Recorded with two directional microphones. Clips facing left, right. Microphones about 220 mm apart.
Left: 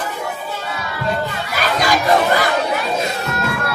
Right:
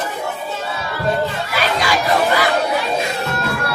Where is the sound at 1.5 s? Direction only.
45° left (ahead or behind).